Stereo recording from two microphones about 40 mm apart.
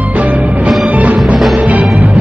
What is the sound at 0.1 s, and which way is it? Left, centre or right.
Music, right.